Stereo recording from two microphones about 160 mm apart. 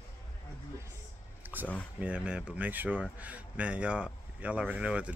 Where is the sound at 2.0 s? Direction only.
5° right (ahead or behind).